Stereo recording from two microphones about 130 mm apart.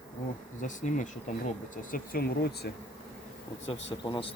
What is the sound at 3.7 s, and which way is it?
Speech, 40° left (ahead or behind).